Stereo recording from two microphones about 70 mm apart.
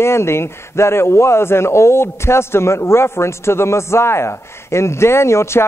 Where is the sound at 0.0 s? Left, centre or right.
Left.